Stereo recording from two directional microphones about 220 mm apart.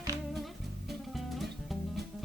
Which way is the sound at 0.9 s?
Centre (ahead or behind).